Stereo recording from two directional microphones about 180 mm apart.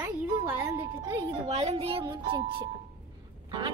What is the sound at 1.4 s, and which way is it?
A woman's voice, 35° right (ahead or behind).